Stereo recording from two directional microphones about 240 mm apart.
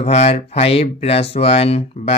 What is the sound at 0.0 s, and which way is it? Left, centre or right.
Speech, left.